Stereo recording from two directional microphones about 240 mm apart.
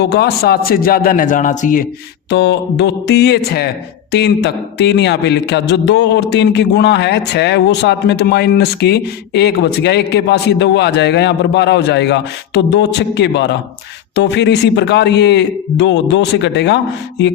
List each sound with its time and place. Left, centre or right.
0.0 s a man's voice: left
2.3 s a man's voice: left